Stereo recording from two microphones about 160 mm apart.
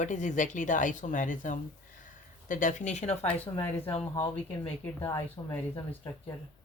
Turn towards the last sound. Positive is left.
turn(degrees=15)  # may be behind; listen again after turning